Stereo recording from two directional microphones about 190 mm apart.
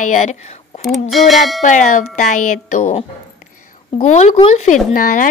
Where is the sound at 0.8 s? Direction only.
Centre (ahead or behind).